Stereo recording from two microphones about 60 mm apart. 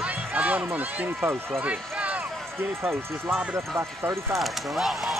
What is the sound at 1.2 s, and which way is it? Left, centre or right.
Speech, right.